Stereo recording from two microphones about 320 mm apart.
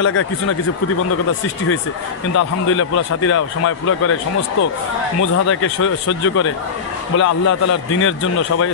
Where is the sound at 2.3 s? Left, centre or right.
Left.